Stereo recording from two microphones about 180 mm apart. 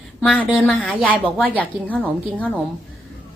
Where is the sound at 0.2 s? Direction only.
5° left (ahead or behind).